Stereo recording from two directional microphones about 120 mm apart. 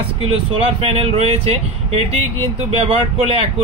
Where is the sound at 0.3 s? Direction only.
50° right (ahead or behind).